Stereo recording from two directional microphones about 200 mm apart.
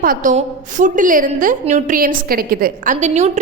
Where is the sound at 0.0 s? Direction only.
45° right (ahead or behind).